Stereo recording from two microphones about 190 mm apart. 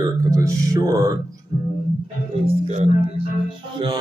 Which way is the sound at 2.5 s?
35° right (ahead or behind).